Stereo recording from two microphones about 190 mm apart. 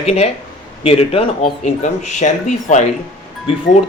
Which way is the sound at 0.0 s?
35° left (ahead or behind).